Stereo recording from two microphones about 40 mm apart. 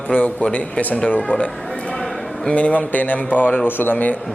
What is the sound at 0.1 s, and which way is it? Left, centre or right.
Speech, left.